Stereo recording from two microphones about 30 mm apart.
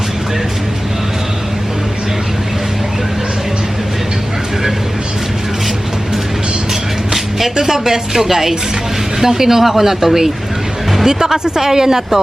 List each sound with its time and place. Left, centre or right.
7.1 s music: centre
7.5 s speech: centre